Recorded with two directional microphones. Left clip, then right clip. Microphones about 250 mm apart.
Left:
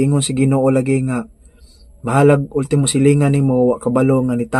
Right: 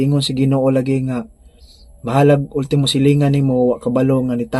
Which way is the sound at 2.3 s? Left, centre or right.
Centre.